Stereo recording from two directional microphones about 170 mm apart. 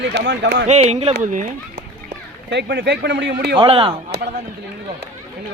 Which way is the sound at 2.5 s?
85° right.